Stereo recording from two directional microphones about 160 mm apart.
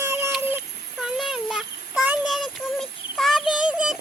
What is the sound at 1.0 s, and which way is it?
Child singing, 5° right (ahead or behind).